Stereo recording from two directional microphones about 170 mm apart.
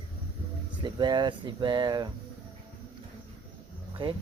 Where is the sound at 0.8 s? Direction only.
25° right (ahead or behind).